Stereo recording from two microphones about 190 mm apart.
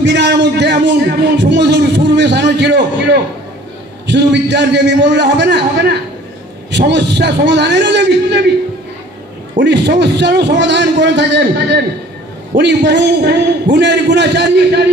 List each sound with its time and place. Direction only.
0.0 s music: 65° right (ahead or behind)
4.1 s a man's voice: 65° right (ahead or behind)
9.6 s a man's voice: 65° right (ahead or behind)